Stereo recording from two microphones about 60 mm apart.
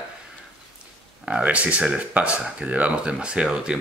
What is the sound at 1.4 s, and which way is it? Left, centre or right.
Speech, right.